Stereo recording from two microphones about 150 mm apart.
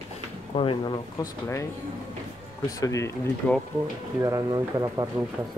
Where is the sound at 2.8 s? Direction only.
20° left (ahead or behind).